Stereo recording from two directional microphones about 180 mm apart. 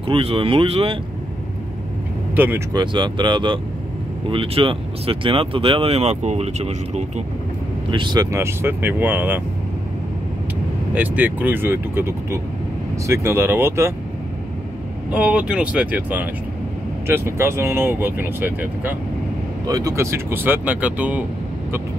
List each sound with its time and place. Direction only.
0.0 s speech: 30° right (ahead or behind)
2.3 s speech: 10° right (ahead or behind)
2.7 s speech: 25° right (ahead or behind)
7.9 s speech: 25° right (ahead or behind)
11.0 s speech: 10° right (ahead or behind)
15.1 s speech: 5° right (ahead or behind)